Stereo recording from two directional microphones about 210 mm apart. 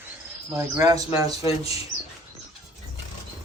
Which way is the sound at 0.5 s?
15° right (ahead or behind).